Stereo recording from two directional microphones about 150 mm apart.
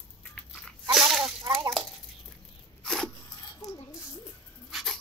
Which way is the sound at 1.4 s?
30° right (ahead or behind).